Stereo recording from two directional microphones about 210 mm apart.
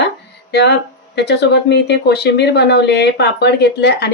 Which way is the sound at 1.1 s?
55° left (ahead or behind).